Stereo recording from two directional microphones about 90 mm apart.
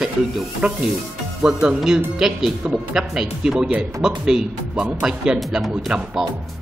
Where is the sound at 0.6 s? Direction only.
15° right (ahead or behind).